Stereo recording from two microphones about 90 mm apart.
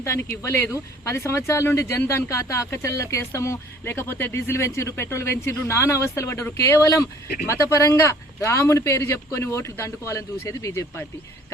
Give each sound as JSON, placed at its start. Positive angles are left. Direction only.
{"t": 0.0, "sound": "speech", "side_deg": 30}